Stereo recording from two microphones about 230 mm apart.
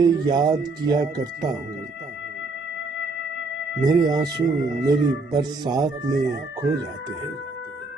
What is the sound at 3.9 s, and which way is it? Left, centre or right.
Speech, centre.